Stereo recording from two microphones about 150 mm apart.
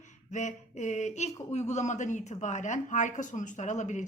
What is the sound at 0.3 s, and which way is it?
A woman's voice, 55° left (ahead or behind).